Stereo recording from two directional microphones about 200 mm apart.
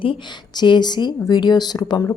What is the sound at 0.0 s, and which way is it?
Speech, 25° left (ahead or behind).